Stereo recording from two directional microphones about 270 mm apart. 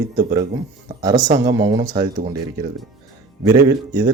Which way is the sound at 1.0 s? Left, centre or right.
Centre.